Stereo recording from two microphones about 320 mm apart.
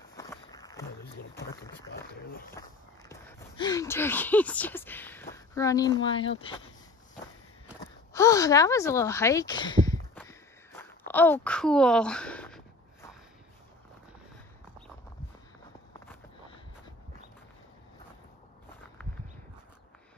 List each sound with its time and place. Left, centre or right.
0.1 s walk: centre
3.1 s speech: centre
8.1 s a sound: centre